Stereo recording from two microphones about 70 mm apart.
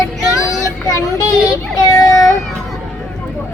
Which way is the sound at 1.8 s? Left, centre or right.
Left.